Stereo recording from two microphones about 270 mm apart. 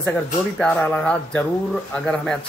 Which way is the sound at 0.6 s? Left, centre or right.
Centre.